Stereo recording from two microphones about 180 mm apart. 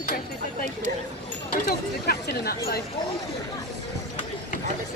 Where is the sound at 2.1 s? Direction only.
60° left (ahead or behind).